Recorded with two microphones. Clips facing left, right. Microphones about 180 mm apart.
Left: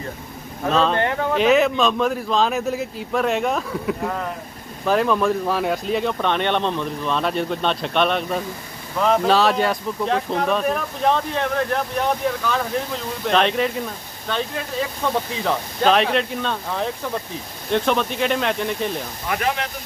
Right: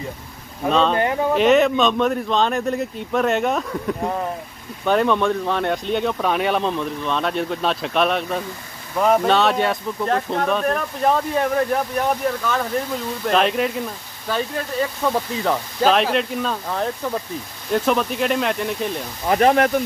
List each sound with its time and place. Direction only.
0.7 s speech: centre (ahead or behind)
0.9 s speech: 15° right (ahead or behind)
1.3 s speech: centre (ahead or behind)
19.2 s speech: 35° right (ahead or behind)